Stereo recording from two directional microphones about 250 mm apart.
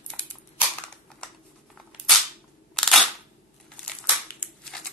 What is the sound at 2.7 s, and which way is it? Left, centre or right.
Single-lens reflex camera, centre.